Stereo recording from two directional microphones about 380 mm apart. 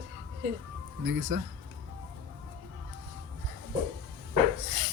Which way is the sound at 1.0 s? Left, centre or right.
Right.